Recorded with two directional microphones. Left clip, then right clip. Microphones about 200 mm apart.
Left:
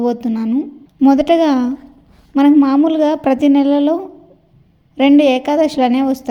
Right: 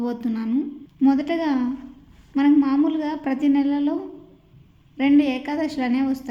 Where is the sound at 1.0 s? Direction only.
35° left (ahead or behind).